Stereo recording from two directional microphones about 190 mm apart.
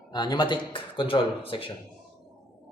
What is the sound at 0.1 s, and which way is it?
A man's voice, 20° left (ahead or behind).